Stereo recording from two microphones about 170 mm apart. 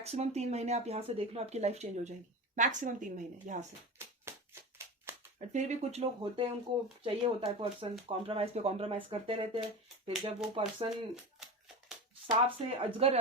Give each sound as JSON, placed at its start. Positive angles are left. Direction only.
{"t": 0.0, "sound": "a woman's voice", "side_deg": -40}
{"t": 4.3, "sound": "a sound", "side_deg": -15}
{"t": 5.5, "sound": "speech", "side_deg": -40}
{"t": 10.8, "sound": "speech", "side_deg": -5}
{"t": 12.3, "sound": "speech", "side_deg": -35}